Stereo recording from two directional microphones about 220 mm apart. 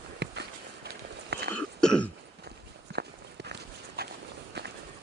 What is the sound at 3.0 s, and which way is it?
Walk, 50° right (ahead or behind).